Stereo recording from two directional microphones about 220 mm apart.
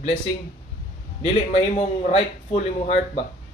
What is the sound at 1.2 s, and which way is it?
Speech, 30° left (ahead or behind).